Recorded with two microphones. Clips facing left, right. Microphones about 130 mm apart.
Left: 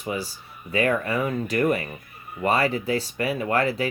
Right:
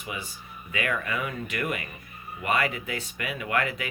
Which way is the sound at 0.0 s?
35° left (ahead or behind).